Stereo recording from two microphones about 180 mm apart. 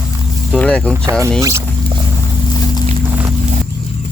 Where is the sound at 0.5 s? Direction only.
5° left (ahead or behind).